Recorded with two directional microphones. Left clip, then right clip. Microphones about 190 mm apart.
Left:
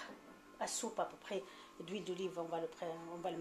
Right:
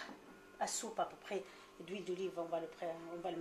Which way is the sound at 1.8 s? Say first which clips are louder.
Right 1 dB; 50° left (ahead or behind).